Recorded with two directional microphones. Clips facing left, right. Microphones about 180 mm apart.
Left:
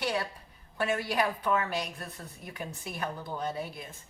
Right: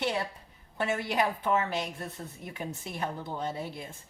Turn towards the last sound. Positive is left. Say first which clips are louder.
# even
turn(degrees=-25)  # may be behind; listen again after turning